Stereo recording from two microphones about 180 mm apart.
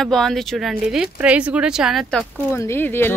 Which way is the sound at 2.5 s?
15° left (ahead or behind).